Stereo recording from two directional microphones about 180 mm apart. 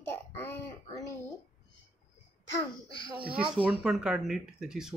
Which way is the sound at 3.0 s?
25° right (ahead or behind).